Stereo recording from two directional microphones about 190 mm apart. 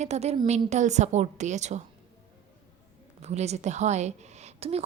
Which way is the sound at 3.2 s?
35° right (ahead or behind).